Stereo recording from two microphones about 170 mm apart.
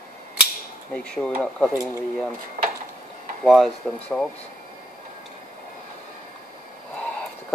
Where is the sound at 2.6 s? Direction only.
50° right (ahead or behind).